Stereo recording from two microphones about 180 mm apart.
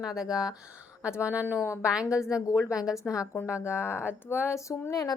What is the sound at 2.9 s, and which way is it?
A woman's voice, 15° left (ahead or behind).